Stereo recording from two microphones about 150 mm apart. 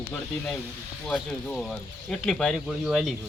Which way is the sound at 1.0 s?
5° left (ahead or behind).